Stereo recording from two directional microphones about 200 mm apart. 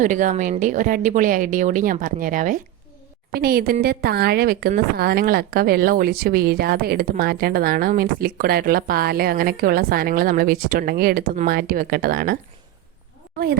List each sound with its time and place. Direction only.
0.0 s a woman's voice: 40° right (ahead or behind)